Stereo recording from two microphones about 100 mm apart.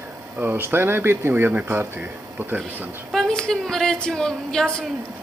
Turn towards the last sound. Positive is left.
turn(degrees=5)  # may be behind; listen again after turning